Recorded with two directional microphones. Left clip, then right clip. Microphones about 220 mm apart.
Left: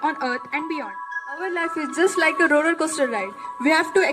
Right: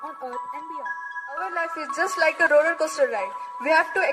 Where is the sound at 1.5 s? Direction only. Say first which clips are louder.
Left 2 dB; 40° right (ahead or behind).